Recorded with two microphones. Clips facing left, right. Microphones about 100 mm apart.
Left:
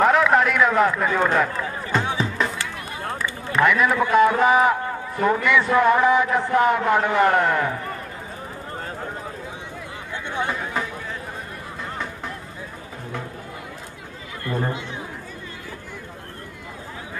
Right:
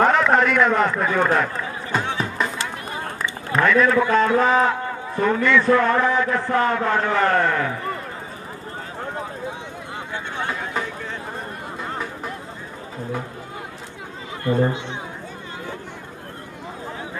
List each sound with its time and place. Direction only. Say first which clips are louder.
0.0 s run: even; 5° left (ahead or behind)
3.6 s a man's voice: right 2 dB; 15° left (ahead or behind)
14.4 s speech: right 6 dB; 25° right (ahead or behind)